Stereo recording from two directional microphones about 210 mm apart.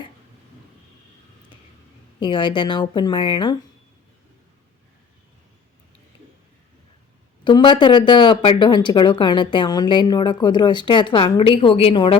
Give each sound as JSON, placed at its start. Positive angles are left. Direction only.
{"t": 2.2, "sound": "speech", "side_deg": 20}
{"t": 7.4, "sound": "speech", "side_deg": 20}